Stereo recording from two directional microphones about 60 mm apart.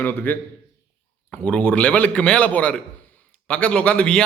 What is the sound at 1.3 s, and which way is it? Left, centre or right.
A man's voice, centre.